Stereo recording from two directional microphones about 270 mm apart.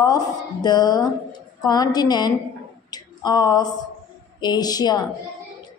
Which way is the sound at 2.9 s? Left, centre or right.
Centre.